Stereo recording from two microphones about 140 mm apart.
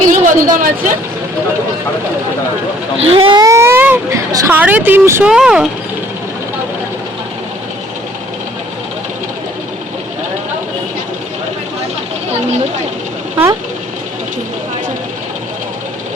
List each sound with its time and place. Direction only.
0.1 s a sound: 70° right (ahead or behind)
3.0 s speech: 40° right (ahead or behind)
3.3 s a sound: 25° right (ahead or behind)
4.3 s a woman's voice: 25° right (ahead or behind)
4.5 s speech: 10° right (ahead or behind)
5.3 s speech: 5° right (ahead or behind)
13.3 s speech: 20° right (ahead or behind)